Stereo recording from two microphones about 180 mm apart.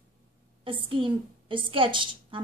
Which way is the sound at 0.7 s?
30° right (ahead or behind).